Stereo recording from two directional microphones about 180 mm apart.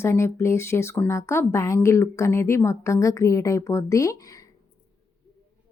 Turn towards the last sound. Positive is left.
turn(degrees=20)  # may be behind; listen again after turning